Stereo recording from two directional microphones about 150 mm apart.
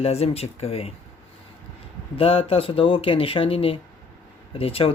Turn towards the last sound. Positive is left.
turn(degrees=40)  # may be behind; listen again after turning